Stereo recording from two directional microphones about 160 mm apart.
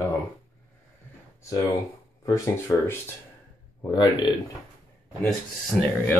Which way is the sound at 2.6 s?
15° left (ahead or behind).